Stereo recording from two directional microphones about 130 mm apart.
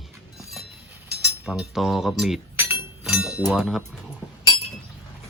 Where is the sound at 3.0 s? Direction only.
5° right (ahead or behind).